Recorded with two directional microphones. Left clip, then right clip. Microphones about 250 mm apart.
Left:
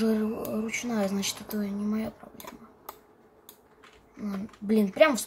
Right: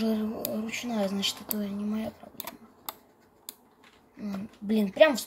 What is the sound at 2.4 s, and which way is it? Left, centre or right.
Typing, right.